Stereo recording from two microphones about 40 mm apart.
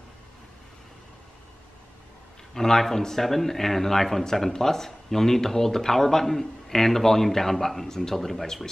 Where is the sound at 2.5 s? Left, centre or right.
Centre.